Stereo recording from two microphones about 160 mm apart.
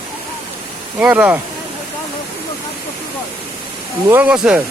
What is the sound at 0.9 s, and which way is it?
Speech, 10° right (ahead or behind).